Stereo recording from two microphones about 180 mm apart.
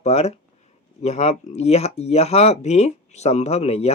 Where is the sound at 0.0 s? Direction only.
40° left (ahead or behind).